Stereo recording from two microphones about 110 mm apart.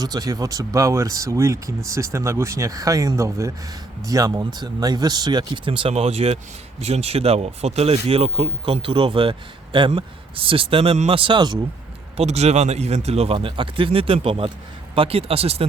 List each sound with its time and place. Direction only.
0.0 s speech: 35° right (ahead or behind); by 5.9 s 50° right (ahead or behind)
5.9 s speech: 70° right (ahead or behind)
11.2 s speech: 45° right (ahead or behind)
12.1 s speech: 75° right (ahead or behind)
13.3 s speech: 50° right (ahead or behind)